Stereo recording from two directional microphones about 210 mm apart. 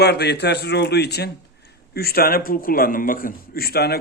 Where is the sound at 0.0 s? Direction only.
50° left (ahead or behind).